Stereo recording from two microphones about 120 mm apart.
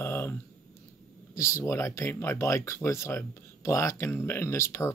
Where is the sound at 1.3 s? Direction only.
25° left (ahead or behind).